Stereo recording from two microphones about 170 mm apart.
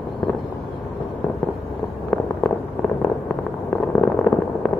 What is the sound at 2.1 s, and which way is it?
Fireworks, 5° left (ahead or behind).